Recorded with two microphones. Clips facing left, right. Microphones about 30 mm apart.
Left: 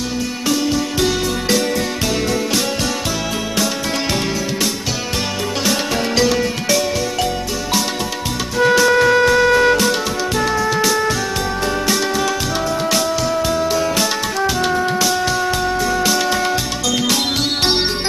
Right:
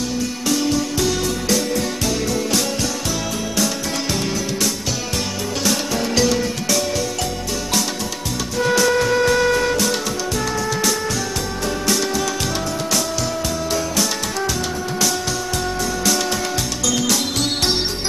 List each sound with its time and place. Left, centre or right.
0.9 s music: left
5.7 s music: left
8.5 s music: left
9.2 s music: centre
14.6 s music: left
15.0 s music: left